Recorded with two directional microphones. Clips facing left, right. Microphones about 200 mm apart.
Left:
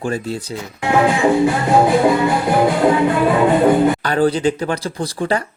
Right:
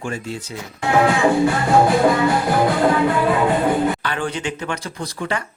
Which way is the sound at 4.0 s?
40° left (ahead or behind).